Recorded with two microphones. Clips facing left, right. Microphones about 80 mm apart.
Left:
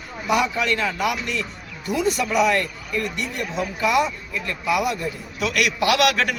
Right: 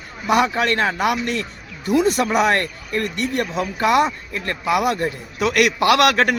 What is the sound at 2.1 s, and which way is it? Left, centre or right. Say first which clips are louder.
Speech: right 2 dB; right.